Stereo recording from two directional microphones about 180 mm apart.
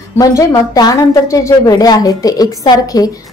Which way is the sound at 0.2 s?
15° left (ahead or behind).